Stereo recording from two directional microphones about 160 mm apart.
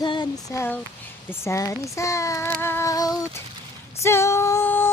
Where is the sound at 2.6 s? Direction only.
15° left (ahead or behind).